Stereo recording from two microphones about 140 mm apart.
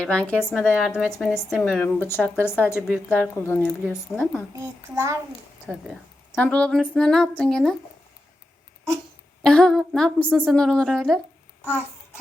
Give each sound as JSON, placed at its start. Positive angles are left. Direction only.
{"t": 0.0, "sound": "speech", "side_deg": 10}
{"t": 0.3, "sound": "a woman's voice", "side_deg": -5}
{"t": 4.5, "sound": "a child's voice", "side_deg": -20}
{"t": 5.6, "sound": "a woman's voice", "side_deg": 0}
{"t": 6.3, "sound": "a woman's voice", "side_deg": 10}
{"t": 9.4, "sound": "a woman's voice", "side_deg": 5}